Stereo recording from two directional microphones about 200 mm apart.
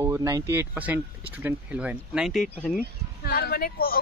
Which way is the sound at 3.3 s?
50° left (ahead or behind).